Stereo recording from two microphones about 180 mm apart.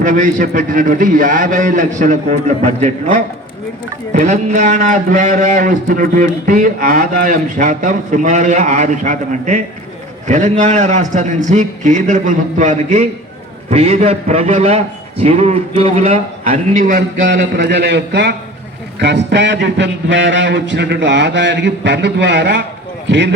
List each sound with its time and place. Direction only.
0.0 s a man's voice: 45° right (ahead or behind)
17.2 s speech: 85° right